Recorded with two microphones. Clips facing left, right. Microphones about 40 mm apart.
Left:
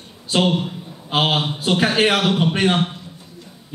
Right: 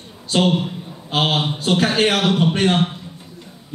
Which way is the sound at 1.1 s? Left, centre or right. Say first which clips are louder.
Even; centre.